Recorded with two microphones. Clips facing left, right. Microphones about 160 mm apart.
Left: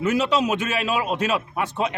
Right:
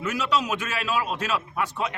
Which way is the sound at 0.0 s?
25° left (ahead or behind).